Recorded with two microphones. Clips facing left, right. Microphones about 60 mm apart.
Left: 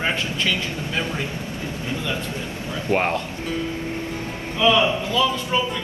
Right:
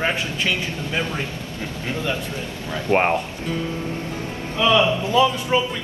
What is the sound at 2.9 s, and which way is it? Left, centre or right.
Speech, centre.